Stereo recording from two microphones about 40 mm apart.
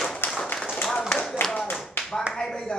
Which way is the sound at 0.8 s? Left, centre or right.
Centre.